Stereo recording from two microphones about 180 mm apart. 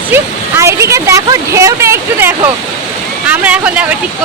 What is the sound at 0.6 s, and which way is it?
Speech, 15° right (ahead or behind).